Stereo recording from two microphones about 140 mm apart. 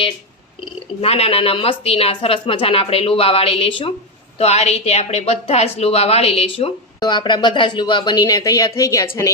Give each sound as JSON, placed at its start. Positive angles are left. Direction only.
{"t": 1.0, "sound": "a woman's voice", "side_deg": 45}
{"t": 4.4, "sound": "a woman's voice", "side_deg": 50}
{"t": 7.0, "sound": "speech", "side_deg": 30}